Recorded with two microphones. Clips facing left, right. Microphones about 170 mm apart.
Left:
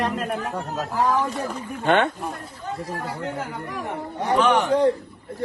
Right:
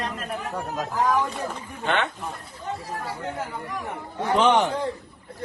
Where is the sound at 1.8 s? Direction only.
50° left (ahead or behind).